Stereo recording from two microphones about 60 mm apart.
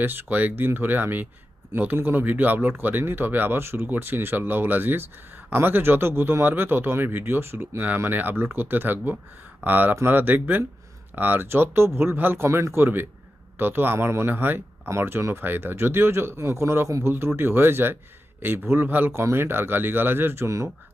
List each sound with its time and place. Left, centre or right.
0.0 s speech: right
14.8 s speech: right
19.1 s speech: right